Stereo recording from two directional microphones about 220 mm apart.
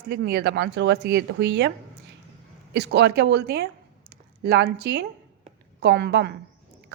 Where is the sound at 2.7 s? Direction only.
50° right (ahead or behind).